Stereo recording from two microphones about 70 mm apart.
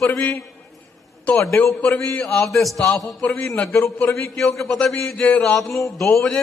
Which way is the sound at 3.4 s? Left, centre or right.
Centre.